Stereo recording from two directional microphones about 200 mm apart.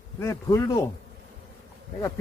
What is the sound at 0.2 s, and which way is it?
Speech, 15° left (ahead or behind).